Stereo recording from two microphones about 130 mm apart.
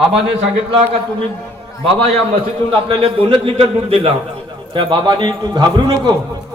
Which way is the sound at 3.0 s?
45° right (ahead or behind).